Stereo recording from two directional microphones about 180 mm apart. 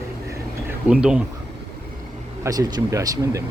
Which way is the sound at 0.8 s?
5° right (ahead or behind).